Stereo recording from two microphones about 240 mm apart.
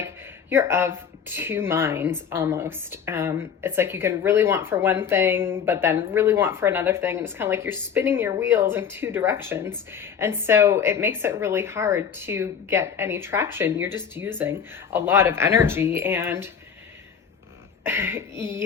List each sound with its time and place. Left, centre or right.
0.5 s a woman's voice: centre
17.8 s a woman's voice: centre